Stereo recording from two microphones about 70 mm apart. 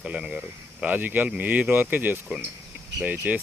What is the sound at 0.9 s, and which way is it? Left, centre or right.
Speech, right.